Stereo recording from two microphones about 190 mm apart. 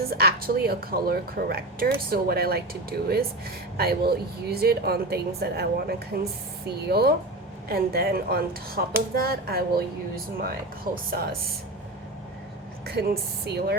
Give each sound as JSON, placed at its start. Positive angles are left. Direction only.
{"t": 0.0, "sound": "a woman's voice", "side_deg": -55}
{"t": 12.8, "sound": "a woman's voice", "side_deg": -55}